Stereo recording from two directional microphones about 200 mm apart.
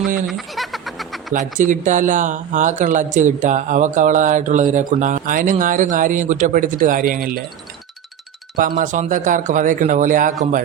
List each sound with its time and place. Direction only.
0.3 s a sound: centre (ahead or behind)
1.3 s speech: 40° right (ahead or behind)
8.5 s speech: 45° right (ahead or behind)